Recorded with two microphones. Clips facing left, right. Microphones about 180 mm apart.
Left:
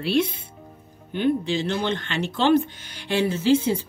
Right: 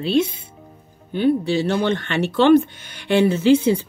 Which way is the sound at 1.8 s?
55° right (ahead or behind).